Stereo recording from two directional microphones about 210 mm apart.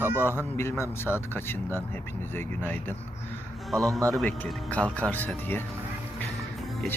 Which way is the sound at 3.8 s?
15° right (ahead or behind).